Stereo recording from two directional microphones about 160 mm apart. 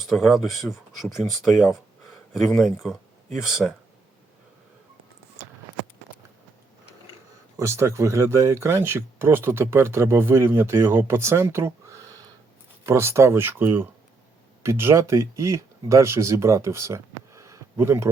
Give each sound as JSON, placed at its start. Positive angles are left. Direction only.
{"t": 0.0, "sound": "speech", "side_deg": 0}
{"t": 7.6, "sound": "speech", "side_deg": -15}